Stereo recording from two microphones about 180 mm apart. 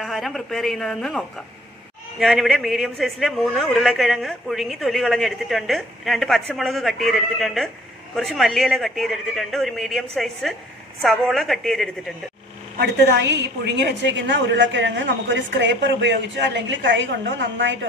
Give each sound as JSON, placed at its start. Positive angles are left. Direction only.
{"t": 0.0, "sound": "a man's voice", "side_deg": 0}
{"t": 12.7, "sound": "a woman's voice", "side_deg": -70}